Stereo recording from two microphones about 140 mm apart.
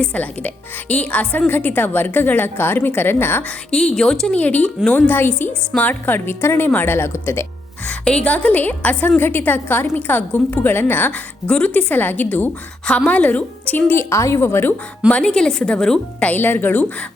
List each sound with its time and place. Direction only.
0.0 s a woman's voice: 10° left (ahead or behind)
3.9 s a woman's voice: 5° left (ahead or behind)
15.4 s a woman's voice: 5° left (ahead or behind)